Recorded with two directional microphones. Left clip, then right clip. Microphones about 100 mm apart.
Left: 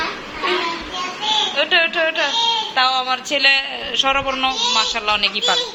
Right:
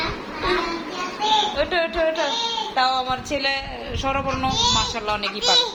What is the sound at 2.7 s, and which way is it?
A woman's voice, 15° right (ahead or behind).